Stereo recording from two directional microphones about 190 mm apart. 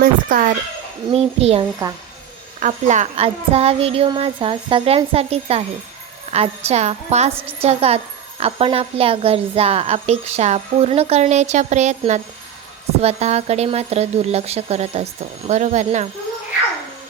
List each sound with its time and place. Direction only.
0.0 s a woman's voice: 45° right (ahead or behind)
1.1 s a woman's voice: 30° right (ahead or behind)